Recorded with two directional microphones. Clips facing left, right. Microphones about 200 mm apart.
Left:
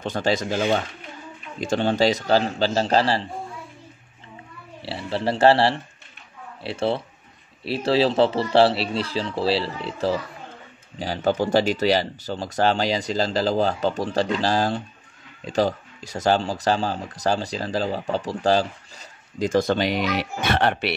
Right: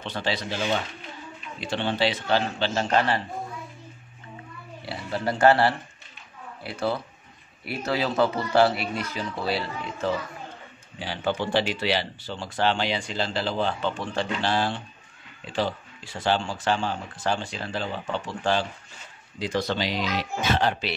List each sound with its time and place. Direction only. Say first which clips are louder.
0.0 s speech: left 6 dB; 45° left (ahead or behind)
4.8 s speech: left 3 dB; 30° left (ahead or behind); by 20.9 s 65° left (ahead or behind)